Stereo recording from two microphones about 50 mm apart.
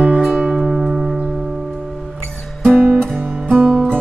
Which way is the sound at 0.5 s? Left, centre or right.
Centre.